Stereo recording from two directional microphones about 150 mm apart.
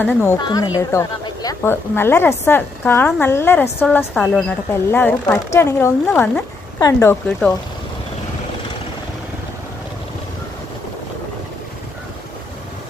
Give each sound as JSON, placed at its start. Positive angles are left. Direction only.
{"t": 0.0, "sound": "a woman's voice", "side_deg": 15}
{"t": 0.4, "sound": "a woman's voice", "side_deg": 25}